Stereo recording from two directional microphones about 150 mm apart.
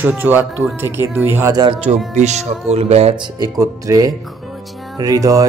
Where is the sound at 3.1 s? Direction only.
30° right (ahead or behind).